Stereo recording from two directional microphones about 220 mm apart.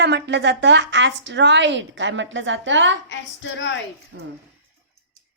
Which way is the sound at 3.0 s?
55° left (ahead or behind).